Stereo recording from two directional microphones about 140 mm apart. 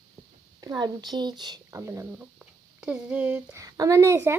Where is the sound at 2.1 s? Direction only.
5° right (ahead or behind).